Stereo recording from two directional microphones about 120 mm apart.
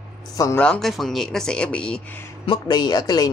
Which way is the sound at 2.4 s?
40° left (ahead or behind).